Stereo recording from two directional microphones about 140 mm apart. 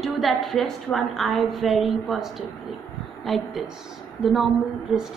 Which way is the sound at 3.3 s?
Centre (ahead or behind).